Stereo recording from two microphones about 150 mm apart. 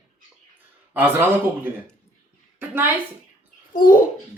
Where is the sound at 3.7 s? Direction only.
70° left (ahead or behind).